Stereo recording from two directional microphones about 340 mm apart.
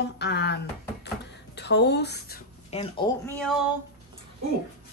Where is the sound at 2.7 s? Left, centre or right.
Centre.